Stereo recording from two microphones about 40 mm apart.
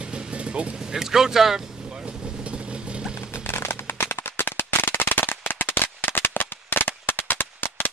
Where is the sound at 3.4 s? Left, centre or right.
Left.